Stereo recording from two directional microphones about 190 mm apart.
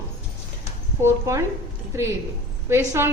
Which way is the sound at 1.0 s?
15° right (ahead or behind).